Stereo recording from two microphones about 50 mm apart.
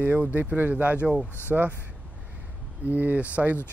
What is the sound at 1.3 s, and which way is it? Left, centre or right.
Speech, left.